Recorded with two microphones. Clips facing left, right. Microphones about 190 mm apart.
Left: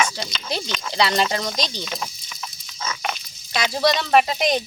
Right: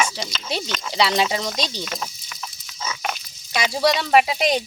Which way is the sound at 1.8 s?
Centre (ahead or behind).